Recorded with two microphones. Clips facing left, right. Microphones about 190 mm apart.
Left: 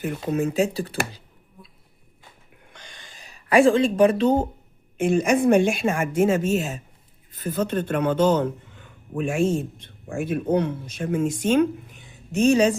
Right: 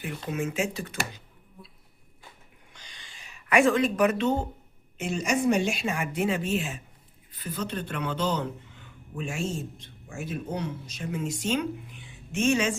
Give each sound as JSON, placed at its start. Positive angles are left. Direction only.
{"t": 0.0, "sound": "speech", "side_deg": 40}
{"t": 2.7, "sound": "a sound", "side_deg": 50}
{"t": 4.9, "sound": "speech", "side_deg": 55}